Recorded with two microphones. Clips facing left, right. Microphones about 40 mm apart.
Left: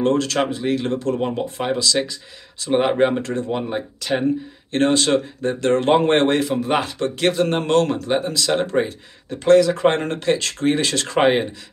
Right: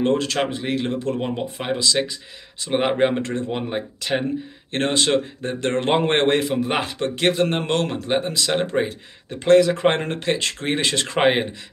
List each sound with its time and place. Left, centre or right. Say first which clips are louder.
0.0 s speech: left 2 dB; right
3.2 s speech: left 2 dB; right
6.5 s speech: left 2 dB; centre
6.9 s speech: left 1 dB; right